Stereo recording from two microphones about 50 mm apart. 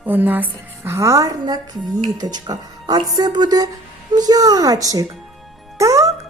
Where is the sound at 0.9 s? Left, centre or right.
Right.